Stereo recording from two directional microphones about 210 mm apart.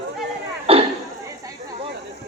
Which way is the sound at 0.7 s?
30° right (ahead or behind).